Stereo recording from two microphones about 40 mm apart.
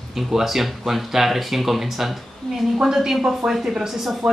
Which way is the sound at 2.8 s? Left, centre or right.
Centre.